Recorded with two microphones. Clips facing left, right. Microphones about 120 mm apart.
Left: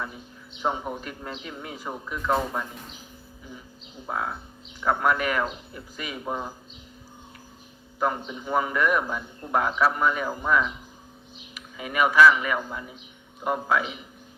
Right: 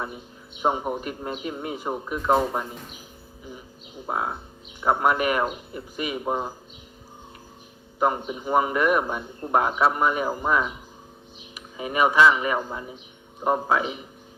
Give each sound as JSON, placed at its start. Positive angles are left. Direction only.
{"t": 0.1, "sound": "a man's voice", "side_deg": -15}
{"t": 4.0, "sound": "speech", "side_deg": -25}
{"t": 7.9, "sound": "a man's voice", "side_deg": -25}
{"t": 8.2, "sound": "speech", "side_deg": -10}
{"t": 9.9, "sound": "a man's voice", "side_deg": -15}
{"t": 11.8, "sound": "speech", "side_deg": -30}